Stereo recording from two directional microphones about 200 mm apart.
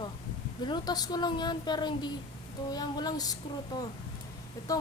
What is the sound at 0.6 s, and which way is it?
A woman's voice, 20° left (ahead or behind).